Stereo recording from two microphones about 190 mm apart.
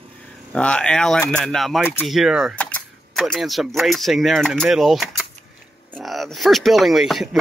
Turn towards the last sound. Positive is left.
turn(degrees=0)  # may be behind; listen again after turning